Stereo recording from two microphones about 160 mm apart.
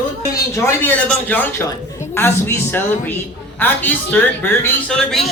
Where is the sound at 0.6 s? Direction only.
10° left (ahead or behind).